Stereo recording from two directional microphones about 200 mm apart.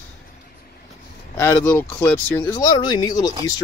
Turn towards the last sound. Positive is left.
turn(degrees=20)  # may be behind; listen again after turning